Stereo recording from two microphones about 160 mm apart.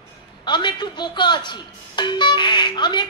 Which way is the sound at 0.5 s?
30° left (ahead or behind).